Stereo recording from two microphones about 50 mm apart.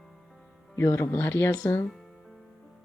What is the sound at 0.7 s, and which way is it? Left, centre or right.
Speech, left.